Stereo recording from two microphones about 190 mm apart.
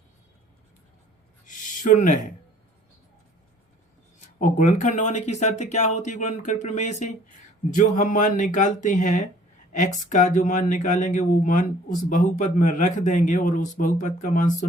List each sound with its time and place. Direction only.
1.5 s speech: 40° left (ahead or behind)
4.4 s speech: 45° left (ahead or behind)